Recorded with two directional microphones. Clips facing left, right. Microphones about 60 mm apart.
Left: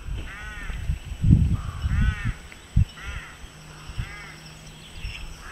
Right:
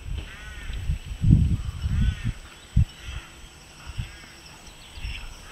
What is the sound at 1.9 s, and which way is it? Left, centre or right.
Crow, left.